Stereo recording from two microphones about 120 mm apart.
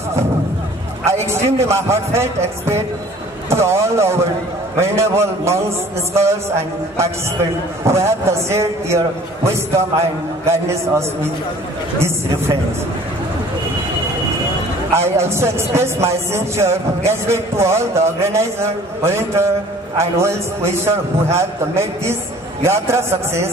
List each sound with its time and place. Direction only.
1.0 s a man's voice: 25° right (ahead or behind)
3.4 s a man's voice: 25° right (ahead or behind)
15.0 s a man's voice: 20° right (ahead or behind)